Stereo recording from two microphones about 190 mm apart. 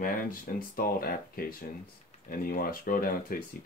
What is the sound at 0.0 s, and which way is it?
Speech, 50° left (ahead or behind).